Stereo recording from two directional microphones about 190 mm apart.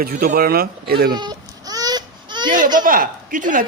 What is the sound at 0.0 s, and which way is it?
Speech, 50° right (ahead or behind).